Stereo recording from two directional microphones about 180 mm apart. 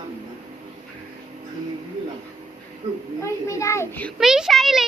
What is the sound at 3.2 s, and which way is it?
Speech, 15° left (ahead or behind).